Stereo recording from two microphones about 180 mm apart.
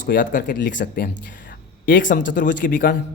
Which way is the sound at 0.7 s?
90° left.